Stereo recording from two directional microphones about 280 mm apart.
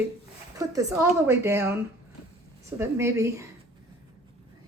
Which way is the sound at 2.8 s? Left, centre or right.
Centre.